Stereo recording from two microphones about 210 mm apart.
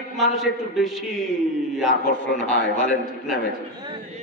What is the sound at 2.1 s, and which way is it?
Speech, 35° left (ahead or behind).